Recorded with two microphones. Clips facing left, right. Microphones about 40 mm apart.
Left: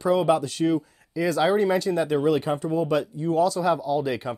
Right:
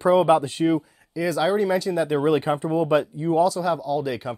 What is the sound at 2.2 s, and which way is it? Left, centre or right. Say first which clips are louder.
Speech: right 2 dB; right.